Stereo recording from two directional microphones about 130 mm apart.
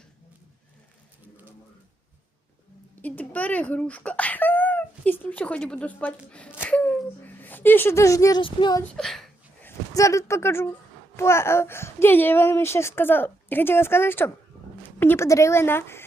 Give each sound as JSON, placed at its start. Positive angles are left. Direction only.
{"t": 3.0, "sound": "speech", "side_deg": 10}
{"t": 6.7, "sound": "a sound", "side_deg": 10}
{"t": 8.4, "sound": "speech", "side_deg": 40}
{"t": 8.8, "sound": "speech", "side_deg": 5}
{"t": 9.6, "sound": "a child's voice", "side_deg": 25}